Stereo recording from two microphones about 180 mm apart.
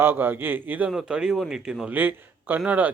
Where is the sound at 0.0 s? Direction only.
10° right (ahead or behind).